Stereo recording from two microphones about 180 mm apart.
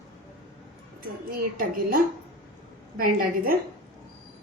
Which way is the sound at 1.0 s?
50° right (ahead or behind).